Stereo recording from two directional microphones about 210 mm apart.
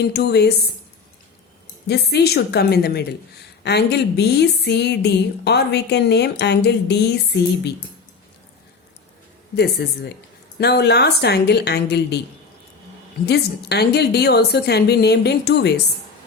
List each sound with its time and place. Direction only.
0.0 s speech: 50° left (ahead or behind)
1.9 s speech: 50° left (ahead or behind)
9.8 s speech: 50° left (ahead or behind)
13.2 s speech: 50° left (ahead or behind)